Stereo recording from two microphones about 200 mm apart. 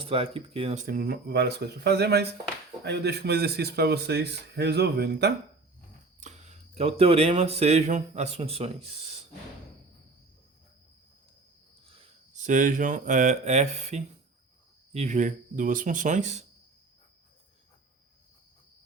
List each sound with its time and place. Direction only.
0.0 s speech: 30° right (ahead or behind)
0.9 s speech: 45° right (ahead or behind)
6.1 s speech: 35° right (ahead or behind)
12.3 s speech: 40° right (ahead or behind)